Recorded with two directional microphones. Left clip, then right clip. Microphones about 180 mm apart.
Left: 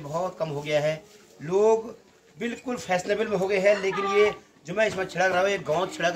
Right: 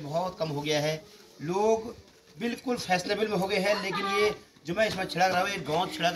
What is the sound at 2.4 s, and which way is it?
A man's voice, 15° left (ahead or behind).